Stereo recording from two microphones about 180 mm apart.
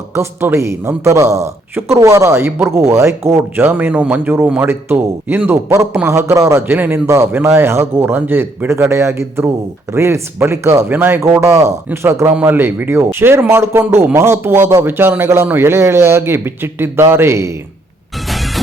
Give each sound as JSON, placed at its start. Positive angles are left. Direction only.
{"t": 0.1, "sound": "speech", "side_deg": -15}
{"t": 18.3, "sound": "music", "side_deg": 0}